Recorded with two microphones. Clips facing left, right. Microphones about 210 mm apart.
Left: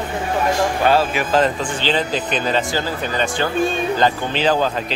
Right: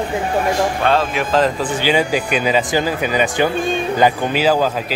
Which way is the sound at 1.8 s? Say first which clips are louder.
Right 4 dB; 10° right (ahead or behind).